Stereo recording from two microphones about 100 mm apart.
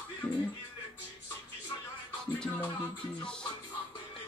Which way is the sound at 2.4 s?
15° left (ahead or behind).